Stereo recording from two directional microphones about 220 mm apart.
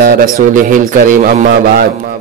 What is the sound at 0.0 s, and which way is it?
A man's voice, 40° right (ahead or behind).